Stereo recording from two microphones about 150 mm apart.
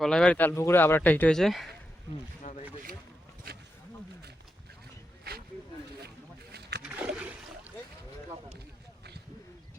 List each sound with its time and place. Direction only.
0.0 s speech: 5° left (ahead or behind)
2.4 s boat: 50° left (ahead or behind)
6.5 s wild animals: 90° right
6.8 s splash: 5° right (ahead or behind)